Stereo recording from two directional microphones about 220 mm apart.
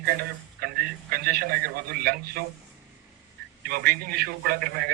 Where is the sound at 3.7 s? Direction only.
45° right (ahead or behind).